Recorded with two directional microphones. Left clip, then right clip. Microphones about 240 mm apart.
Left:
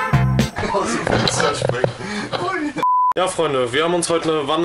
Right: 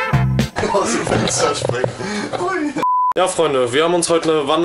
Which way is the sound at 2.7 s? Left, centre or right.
Centre.